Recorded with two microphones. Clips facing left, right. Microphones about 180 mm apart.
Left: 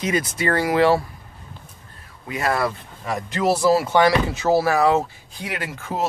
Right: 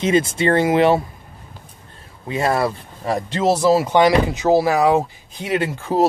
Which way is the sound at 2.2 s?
25° right (ahead or behind).